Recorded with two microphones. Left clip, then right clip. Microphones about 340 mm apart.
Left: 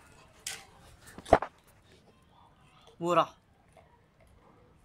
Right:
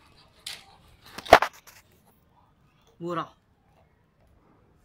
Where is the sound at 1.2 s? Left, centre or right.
Right.